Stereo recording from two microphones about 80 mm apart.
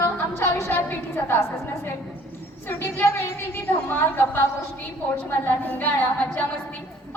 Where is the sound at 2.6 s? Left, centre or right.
Left.